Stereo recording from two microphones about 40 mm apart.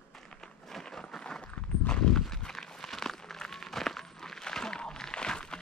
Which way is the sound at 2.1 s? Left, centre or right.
Centre.